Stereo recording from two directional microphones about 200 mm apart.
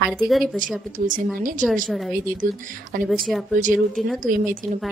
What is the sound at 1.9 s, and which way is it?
Speech, centre (ahead or behind).